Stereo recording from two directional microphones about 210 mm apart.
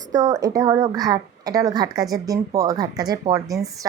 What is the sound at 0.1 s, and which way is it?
A woman's voice, 15° right (ahead or behind).